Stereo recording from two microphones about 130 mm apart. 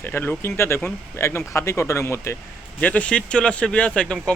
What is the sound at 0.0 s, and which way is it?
Speech, 15° left (ahead or behind).